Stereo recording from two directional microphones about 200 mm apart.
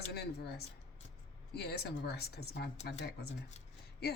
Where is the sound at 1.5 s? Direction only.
55° left (ahead or behind).